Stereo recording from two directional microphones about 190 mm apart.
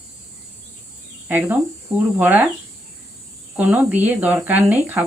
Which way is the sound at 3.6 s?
10° right (ahead or behind).